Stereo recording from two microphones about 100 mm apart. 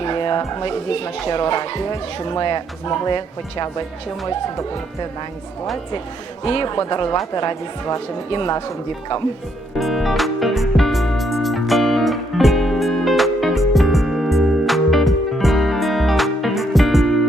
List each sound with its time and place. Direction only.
0.0 s music: 50° left (ahead or behind)
0.7 s speech: 60° left (ahead or behind)
6.4 s a man's voice: 60° left (ahead or behind)
6.7 s speech: 40° left (ahead or behind)
8.3 s speech: 50° left (ahead or behind)
9.7 s music: centre (ahead or behind)